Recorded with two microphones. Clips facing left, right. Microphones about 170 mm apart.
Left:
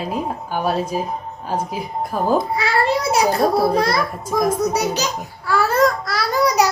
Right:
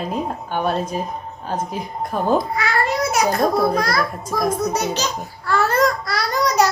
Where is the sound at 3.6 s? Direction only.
30° left (ahead or behind).